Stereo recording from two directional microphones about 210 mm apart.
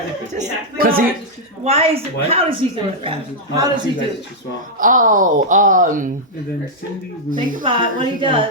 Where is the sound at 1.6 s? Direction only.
30° right (ahead or behind).